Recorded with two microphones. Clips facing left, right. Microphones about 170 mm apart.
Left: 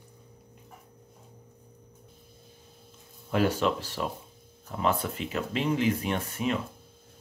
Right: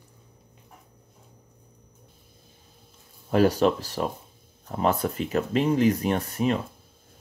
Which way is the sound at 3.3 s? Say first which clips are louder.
Right 5 dB; 40° right (ahead or behind).